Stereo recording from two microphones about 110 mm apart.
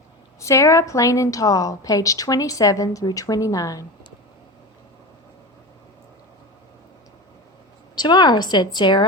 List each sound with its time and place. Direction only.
0.3 s a woman's voice: 30° left (ahead or behind)
7.9 s a woman's voice: 40° left (ahead or behind)